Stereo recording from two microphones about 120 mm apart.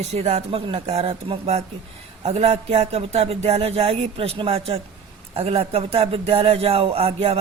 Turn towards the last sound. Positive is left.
turn(degrees=-55)  # may be behind; listen again after turning